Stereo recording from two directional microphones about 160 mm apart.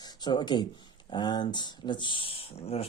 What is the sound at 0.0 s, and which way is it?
Speech, 25° left (ahead or behind).